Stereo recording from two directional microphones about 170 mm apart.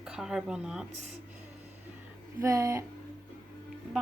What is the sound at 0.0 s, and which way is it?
Speech, 5° right (ahead or behind).